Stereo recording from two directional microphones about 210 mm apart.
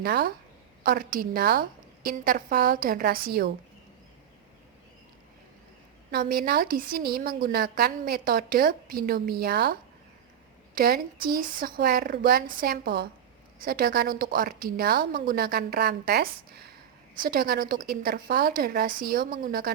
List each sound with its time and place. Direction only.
0.0 s a woman's voice: 50° right (ahead or behind)
6.1 s a woman's voice: 45° right (ahead or behind)
10.8 s a woman's voice: 45° right (ahead or behind)